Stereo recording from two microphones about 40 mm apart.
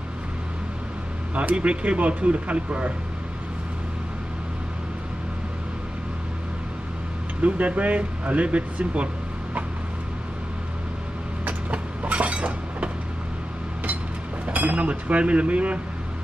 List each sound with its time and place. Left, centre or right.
1.3 s speech: right
7.4 s speech: right
11.7 s train: right
14.4 s speech: right